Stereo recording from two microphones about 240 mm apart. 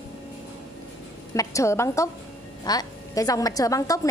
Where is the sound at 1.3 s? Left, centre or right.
Centre.